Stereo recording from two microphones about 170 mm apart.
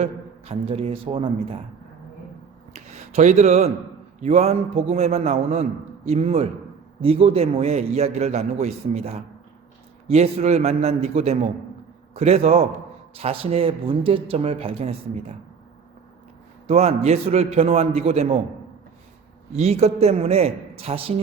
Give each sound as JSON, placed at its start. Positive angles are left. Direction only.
{"t": 0.0, "sound": "a man's voice", "side_deg": -35}
{"t": 2.7, "sound": "a man's voice", "side_deg": -40}
{"t": 16.6, "sound": "a man's voice", "side_deg": -40}
{"t": 19.5, "sound": "a man's voice", "side_deg": -40}